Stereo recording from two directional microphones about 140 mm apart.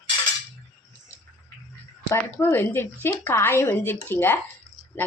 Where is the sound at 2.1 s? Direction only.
15° left (ahead or behind).